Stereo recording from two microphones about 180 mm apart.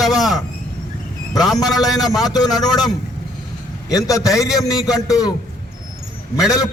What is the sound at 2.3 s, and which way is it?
Speech, 20° left (ahead or behind).